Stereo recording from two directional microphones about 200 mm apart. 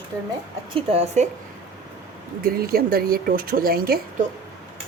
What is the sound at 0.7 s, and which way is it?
Speech, 30° right (ahead or behind).